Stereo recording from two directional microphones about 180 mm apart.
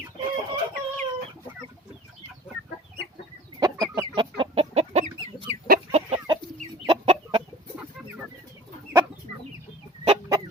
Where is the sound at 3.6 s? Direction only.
25° right (ahead or behind).